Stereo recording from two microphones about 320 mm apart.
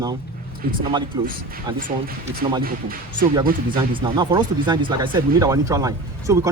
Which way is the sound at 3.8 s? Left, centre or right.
Centre.